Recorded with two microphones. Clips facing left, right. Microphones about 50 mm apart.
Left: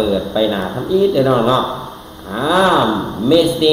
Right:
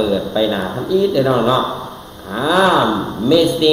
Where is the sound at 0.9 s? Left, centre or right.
Centre.